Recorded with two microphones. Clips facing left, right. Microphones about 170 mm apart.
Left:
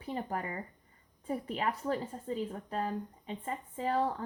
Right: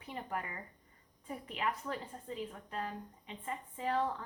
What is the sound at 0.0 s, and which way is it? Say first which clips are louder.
A woman's voice: left 5 dB; 35° left (ahead or behind).